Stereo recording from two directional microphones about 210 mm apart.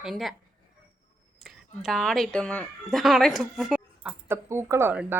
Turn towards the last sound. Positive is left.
turn(degrees=-10)  # may be behind; listen again after turning